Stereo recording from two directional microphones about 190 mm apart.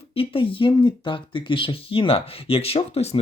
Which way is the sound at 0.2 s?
30° left (ahead or behind).